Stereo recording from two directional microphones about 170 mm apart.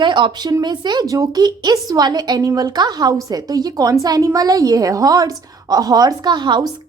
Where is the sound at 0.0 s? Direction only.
25° right (ahead or behind).